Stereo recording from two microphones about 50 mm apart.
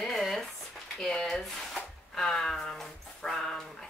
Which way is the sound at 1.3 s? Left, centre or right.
Centre.